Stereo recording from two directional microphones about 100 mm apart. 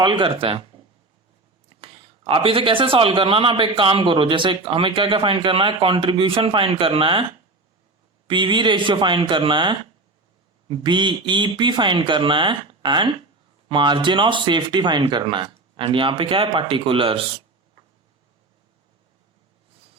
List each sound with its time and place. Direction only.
0.0 s a man's voice: 55° right (ahead or behind)
1.8 s a man's voice: 60° right (ahead or behind)
8.3 s speech: 55° right (ahead or behind)